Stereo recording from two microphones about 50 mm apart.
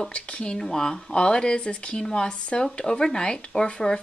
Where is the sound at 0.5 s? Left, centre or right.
Centre.